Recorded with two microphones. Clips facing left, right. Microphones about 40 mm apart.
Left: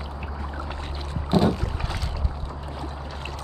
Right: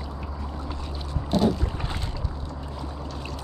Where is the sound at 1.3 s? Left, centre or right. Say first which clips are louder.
Left 1 dB; left.